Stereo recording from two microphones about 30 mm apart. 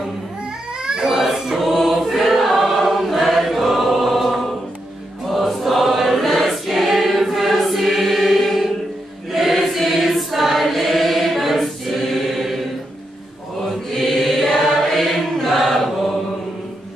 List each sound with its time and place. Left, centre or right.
0.8 s baby cry: right
1.1 s a sound: centre
1.6 s choir: centre
13.9 s chant: centre
15.3 s choir: centre